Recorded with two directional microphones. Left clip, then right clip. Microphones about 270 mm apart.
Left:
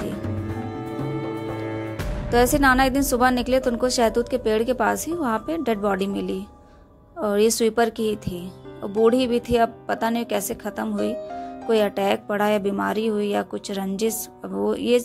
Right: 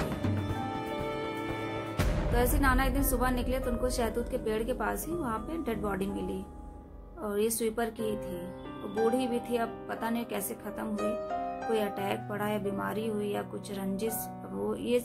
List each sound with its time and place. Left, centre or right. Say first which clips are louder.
2.3 s a woman's voice: left 12 dB; left